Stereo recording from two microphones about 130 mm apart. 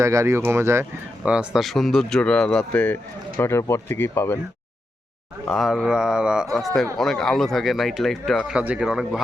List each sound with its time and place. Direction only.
0.0 s speech: 20° right (ahead or behind)
1.2 s speech: 10° right (ahead or behind); by 4.4 s 20° left (ahead or behind)
5.5 s speech: centre (ahead or behind)
8.5 s speech: 10° right (ahead or behind)